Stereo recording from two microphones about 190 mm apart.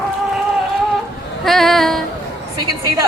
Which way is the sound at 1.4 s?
Centre (ahead or behind).